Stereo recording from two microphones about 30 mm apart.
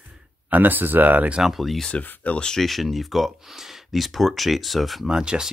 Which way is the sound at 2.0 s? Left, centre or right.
Left.